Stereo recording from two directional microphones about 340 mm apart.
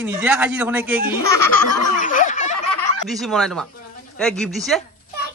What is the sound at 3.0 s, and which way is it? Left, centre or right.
Speech, centre.